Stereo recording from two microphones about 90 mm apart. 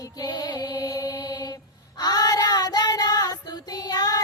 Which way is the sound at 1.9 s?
45° left (ahead or behind).